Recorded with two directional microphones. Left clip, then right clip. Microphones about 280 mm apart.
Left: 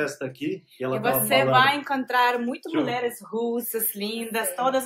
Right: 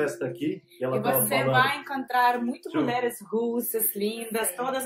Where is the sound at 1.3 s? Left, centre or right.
Centre.